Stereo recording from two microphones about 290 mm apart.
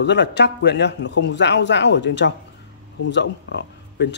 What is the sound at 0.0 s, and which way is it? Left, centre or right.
Speech, left.